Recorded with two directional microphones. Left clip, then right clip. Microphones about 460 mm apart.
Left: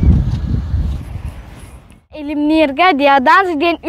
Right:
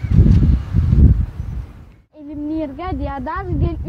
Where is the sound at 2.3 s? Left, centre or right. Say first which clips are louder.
Left 11 dB; centre.